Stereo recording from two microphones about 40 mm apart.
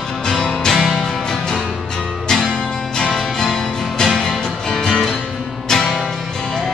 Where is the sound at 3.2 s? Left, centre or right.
Centre.